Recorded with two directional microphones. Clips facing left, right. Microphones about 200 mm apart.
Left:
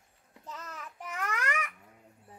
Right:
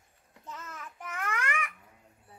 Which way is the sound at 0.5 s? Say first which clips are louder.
Even; 35° left (ahead or behind).